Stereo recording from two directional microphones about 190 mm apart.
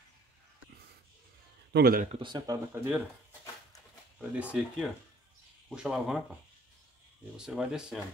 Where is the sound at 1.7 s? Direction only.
50° right (ahead or behind).